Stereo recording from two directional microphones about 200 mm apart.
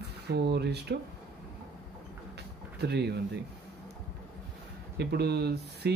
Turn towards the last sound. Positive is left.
turn(degrees=-55)  # may be behind; listen again after turning